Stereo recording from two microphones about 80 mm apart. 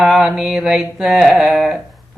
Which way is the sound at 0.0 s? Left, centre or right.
Centre.